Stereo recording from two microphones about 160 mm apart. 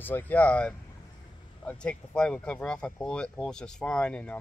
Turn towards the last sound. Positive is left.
turn(degrees=5)  # may be behind; listen again after turning